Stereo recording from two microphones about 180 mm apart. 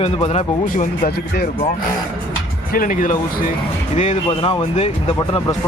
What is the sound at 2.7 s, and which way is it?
Speech, 45° left (ahead or behind).